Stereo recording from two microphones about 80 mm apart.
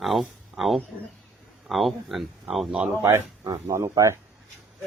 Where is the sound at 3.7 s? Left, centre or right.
Right.